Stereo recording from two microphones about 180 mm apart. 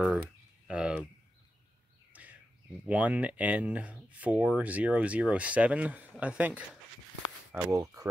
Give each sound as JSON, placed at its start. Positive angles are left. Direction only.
{"t": 0.7, "sound": "a sound", "side_deg": -5}
{"t": 2.9, "sound": "speech", "side_deg": -10}
{"t": 7.5, "sound": "speech", "side_deg": -20}